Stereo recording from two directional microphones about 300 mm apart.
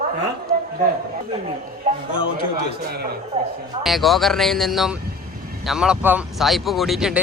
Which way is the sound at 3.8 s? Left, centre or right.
Centre.